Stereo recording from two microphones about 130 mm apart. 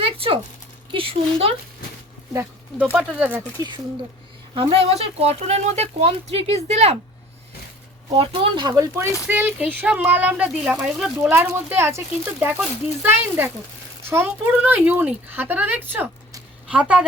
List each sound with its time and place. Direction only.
0.0 s a sound: 45° right (ahead or behind)
0.9 s speech: 45° right (ahead or behind)
2.3 s speech: 15° right (ahead or behind)
4.5 s speech: 50° right (ahead or behind)
8.1 s speech: 45° right (ahead or behind)
9.2 s speech: 15° right (ahead or behind)
11.2 s speech: 15° right (ahead or behind)